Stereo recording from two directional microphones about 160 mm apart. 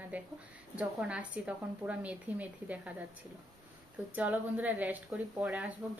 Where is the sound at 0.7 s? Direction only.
5° right (ahead or behind).